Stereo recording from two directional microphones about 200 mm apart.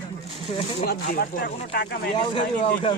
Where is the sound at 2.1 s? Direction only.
25° left (ahead or behind).